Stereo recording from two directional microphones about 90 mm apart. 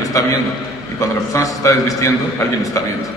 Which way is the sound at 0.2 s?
35° left (ahead or behind).